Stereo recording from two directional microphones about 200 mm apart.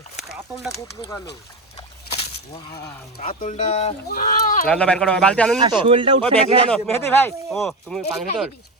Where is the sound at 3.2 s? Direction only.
40° left (ahead or behind).